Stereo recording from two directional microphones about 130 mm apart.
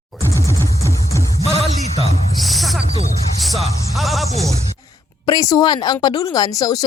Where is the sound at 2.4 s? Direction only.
Centre (ahead or behind).